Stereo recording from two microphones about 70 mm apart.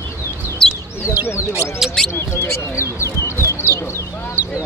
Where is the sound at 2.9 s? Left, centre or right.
Left.